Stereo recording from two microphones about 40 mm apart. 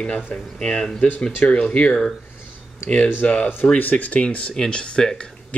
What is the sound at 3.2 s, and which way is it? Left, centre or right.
Speech, left.